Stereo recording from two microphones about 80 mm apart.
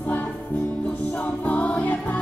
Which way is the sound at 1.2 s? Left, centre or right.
Centre.